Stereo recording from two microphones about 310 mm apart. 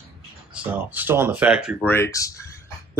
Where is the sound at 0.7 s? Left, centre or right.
Centre.